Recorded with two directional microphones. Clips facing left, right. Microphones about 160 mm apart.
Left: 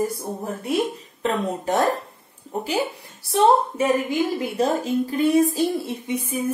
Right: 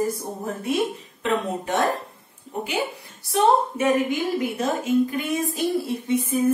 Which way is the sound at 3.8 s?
35° left (ahead or behind).